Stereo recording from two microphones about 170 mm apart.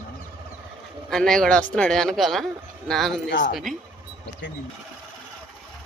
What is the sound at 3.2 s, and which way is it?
Speech, 90° left.